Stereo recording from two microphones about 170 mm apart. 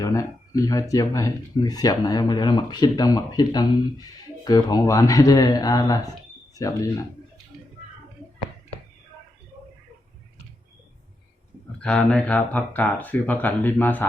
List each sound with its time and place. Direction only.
0.0 s speech: 20° left (ahead or behind)
11.8 s speech: 5° left (ahead or behind)